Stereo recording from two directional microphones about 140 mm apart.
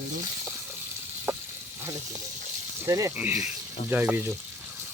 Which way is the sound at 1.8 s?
20° right (ahead or behind).